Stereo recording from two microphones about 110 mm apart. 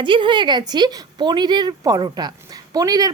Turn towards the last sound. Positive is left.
turn(degrees=-35)  # may be behind; listen again after turning